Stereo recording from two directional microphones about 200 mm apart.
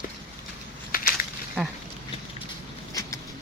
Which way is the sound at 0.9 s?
45° left (ahead or behind).